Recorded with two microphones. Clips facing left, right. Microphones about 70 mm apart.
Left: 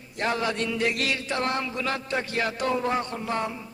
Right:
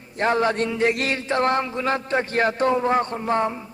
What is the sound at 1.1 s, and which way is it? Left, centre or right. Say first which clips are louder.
Speech: right 6 dB; right.